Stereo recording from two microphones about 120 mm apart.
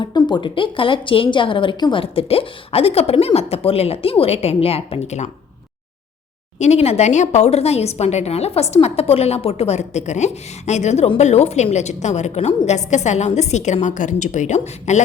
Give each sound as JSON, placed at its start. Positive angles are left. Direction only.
{"t": 0.0, "sound": "a woman's voice", "side_deg": 40}
{"t": 6.6, "sound": "a woman's voice", "side_deg": 65}
{"t": 13.8, "sound": "a woman's voice", "side_deg": 90}